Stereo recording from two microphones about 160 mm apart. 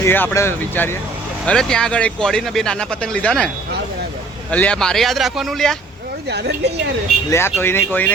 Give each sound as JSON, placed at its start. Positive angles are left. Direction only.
{"t": 0.0, "sound": "speech", "side_deg": 10}
{"t": 1.5, "sound": "speech", "side_deg": 5}
{"t": 4.5, "sound": "speech", "side_deg": 5}
{"t": 6.3, "sound": "a woman's voice", "side_deg": -90}
{"t": 7.3, "sound": "speech", "side_deg": 15}